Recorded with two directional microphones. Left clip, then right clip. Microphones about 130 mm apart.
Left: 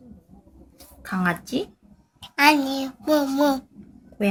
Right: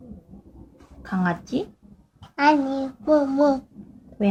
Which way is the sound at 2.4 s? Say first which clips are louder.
Left 1 dB; 5° right (ahead or behind).